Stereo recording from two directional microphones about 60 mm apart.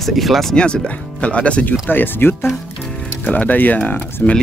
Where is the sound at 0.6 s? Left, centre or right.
Centre.